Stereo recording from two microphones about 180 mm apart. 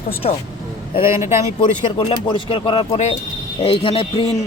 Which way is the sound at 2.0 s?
30° left (ahead or behind).